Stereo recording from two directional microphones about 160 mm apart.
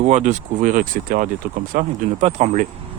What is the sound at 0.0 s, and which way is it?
Speech, 45° right (ahead or behind).